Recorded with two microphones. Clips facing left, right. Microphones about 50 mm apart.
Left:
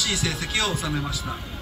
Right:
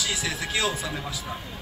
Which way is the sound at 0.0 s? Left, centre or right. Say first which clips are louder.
Left 2 dB; centre.